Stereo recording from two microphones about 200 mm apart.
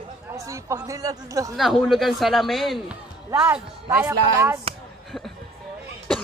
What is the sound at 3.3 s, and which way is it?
Speech, 10° right (ahead or behind).